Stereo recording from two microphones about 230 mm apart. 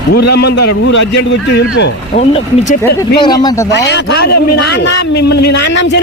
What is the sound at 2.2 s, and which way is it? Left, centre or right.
Speech, left.